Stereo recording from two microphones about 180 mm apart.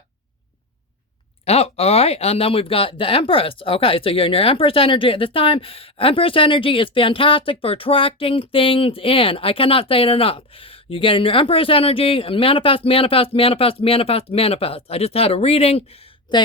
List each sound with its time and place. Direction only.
1.5 s speech: 35° left (ahead or behind)